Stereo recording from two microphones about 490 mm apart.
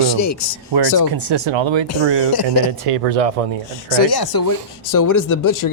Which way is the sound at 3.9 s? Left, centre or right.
Left.